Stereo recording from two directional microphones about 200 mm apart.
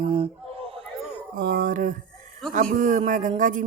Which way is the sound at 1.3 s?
40° right (ahead or behind).